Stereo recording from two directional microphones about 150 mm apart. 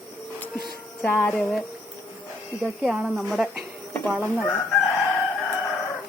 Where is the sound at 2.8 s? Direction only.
5° right (ahead or behind).